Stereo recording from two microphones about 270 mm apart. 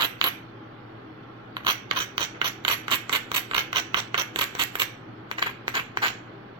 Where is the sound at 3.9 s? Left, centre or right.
Centre.